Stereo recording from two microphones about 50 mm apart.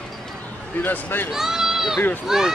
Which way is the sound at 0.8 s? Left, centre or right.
Left.